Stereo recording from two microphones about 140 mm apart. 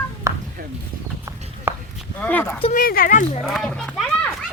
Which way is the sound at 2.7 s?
90° left.